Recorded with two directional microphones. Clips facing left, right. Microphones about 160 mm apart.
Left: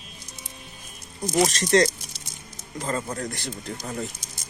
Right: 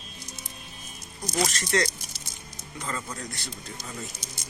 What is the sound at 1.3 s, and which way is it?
Speech, 30° left (ahead or behind).